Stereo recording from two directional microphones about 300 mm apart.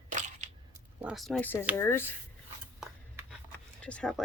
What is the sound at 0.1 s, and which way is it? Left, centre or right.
Crushing, right.